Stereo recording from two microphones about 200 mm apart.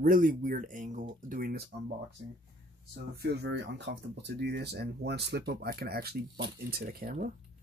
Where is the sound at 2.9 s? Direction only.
55° right (ahead or behind).